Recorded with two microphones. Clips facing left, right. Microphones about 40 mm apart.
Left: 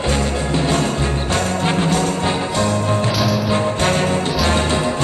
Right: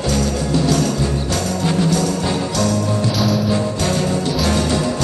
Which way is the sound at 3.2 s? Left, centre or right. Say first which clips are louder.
Even; centre.